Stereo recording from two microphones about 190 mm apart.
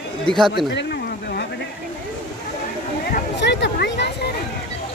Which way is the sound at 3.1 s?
65° left (ahead or behind).